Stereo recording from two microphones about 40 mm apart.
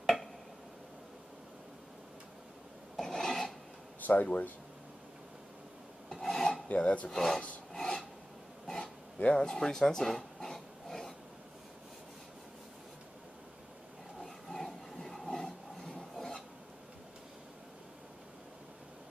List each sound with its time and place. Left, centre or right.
0.0 s a sound: centre
3.0 s filing: centre
4.0 s speech: left
6.2 s filing: centre
6.7 s filing: left
7.1 s speech: centre
7.7 s filing: centre
8.6 s a sound: centre
9.3 s dog: centre
14.2 s a sound: centre
16.0 s filing: centre